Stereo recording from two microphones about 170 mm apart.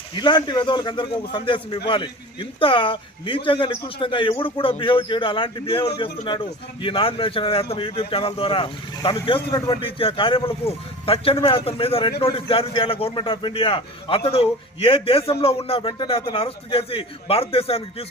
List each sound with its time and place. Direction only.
0.2 s a man's voice: 25° left (ahead or behind)